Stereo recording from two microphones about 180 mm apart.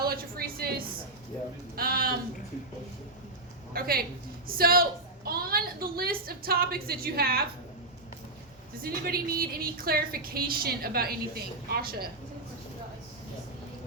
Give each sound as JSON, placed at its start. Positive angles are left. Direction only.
{"t": 0.0, "sound": "a sound", "side_deg": -55}
{"t": 1.7, "sound": "a woman's voice", "side_deg": -55}
{"t": 3.7, "sound": "a woman's voice", "side_deg": -55}
{"t": 8.8, "sound": "a woman's voice", "side_deg": -55}